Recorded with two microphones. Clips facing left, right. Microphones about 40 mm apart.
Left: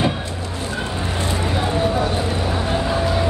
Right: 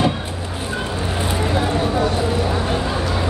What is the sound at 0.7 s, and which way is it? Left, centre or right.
Vehicle, centre.